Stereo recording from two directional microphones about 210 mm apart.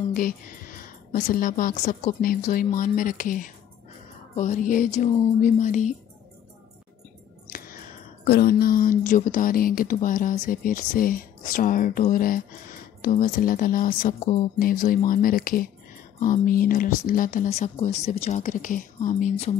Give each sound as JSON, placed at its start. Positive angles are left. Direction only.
{"t": 0.1, "sound": "speech", "side_deg": 40}
{"t": 7.4, "sound": "music", "side_deg": 45}
{"t": 8.3, "sound": "speech", "side_deg": 45}